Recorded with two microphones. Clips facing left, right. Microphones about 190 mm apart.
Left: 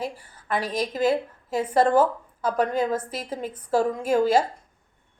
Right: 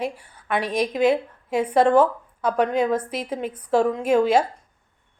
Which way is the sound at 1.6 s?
5° left (ahead or behind).